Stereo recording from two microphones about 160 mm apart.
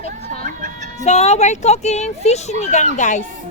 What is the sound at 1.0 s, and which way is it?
Speech, 45° left (ahead or behind).